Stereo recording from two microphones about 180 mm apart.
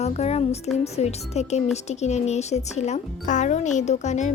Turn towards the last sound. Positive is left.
turn(degrees=40)  # may be behind; listen again after turning